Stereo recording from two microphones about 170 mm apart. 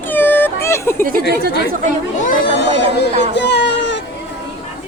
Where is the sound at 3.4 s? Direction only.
85° left.